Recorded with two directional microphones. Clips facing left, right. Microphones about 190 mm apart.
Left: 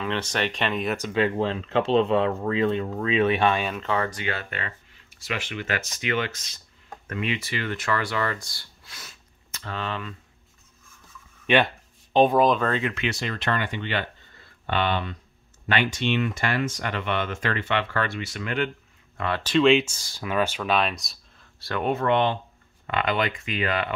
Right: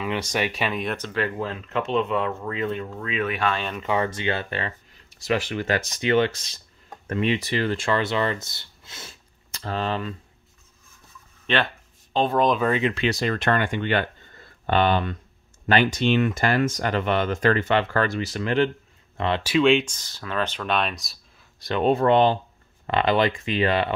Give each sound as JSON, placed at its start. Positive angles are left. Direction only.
{"t": 0.0, "sound": "speech", "side_deg": -10}
{"t": 0.9, "sound": "speech", "side_deg": 15}
{"t": 3.5, "sound": "speech", "side_deg": 5}
{"t": 3.8, "sound": "speech", "side_deg": -15}
{"t": 11.4, "sound": "a sound", "side_deg": 15}
{"t": 12.4, "sound": "speech", "side_deg": 0}
{"t": 12.6, "sound": "speech", "side_deg": -15}
{"t": 12.9, "sound": "speech", "side_deg": -35}
{"t": 19.4, "sound": "speech", "side_deg": -5}
{"t": 21.5, "sound": "speech", "side_deg": -20}
{"t": 21.8, "sound": "speech", "side_deg": -35}